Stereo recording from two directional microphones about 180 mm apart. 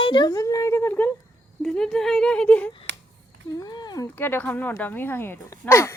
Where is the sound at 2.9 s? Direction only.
85° right.